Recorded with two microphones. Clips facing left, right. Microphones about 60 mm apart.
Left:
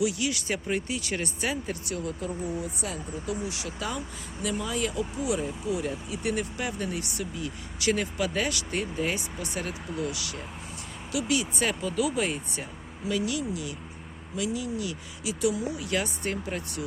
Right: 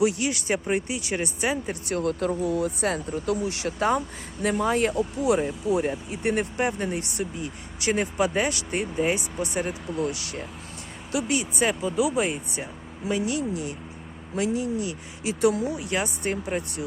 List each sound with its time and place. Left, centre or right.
0.0 s speech: right
2.0 s speech: right
9.8 s speech: centre
10.1 s speech: right
11.6 s speech: centre
13.1 s speech: right
15.7 s speech: right